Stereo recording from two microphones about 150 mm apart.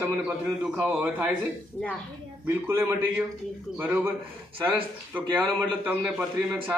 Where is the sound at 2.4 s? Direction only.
15° right (ahead or behind).